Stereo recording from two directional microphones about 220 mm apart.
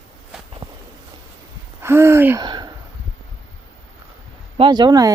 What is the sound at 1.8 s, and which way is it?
Gasp, 10° right (ahead or behind).